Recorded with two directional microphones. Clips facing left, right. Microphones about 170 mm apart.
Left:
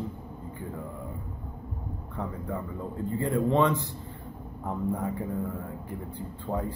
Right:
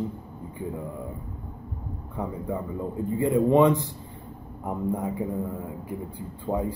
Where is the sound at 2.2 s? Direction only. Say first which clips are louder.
Right 4 dB; 10° right (ahead or behind).